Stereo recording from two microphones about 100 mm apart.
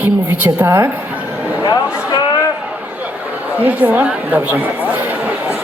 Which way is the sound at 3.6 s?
15° right (ahead or behind).